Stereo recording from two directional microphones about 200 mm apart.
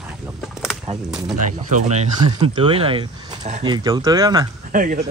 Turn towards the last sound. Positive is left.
turn(degrees=-40)  # may be behind; listen again after turning